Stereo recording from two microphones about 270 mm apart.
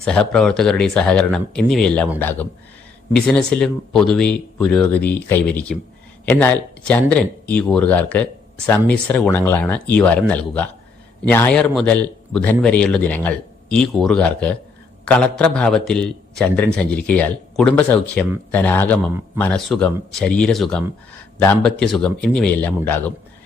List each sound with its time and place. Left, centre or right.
0.0 s a man's voice: centre